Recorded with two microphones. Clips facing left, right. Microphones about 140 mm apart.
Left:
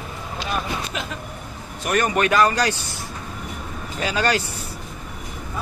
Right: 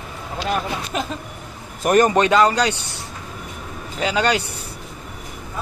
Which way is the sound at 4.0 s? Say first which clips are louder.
Right 2 dB; 15° right (ahead or behind).